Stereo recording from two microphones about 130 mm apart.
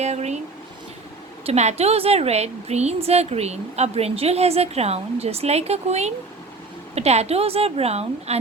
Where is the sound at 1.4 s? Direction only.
55° right (ahead or behind).